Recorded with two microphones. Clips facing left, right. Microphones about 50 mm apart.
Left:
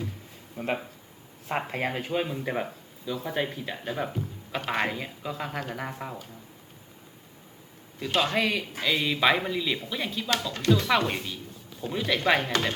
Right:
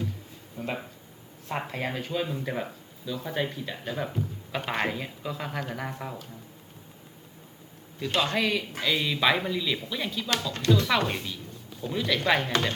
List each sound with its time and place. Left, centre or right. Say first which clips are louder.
0.5 s speech: left 3 dB; left
1.5 s speech: left 2 dB; centre
1.7 s speech: left 2 dB; left
2.3 s speech: left 1 dB; centre
3.2 s speech: even; centre
8.1 s speech: left 1 dB; centre
11.8 s speech: even; centre
12.5 s speech: even; centre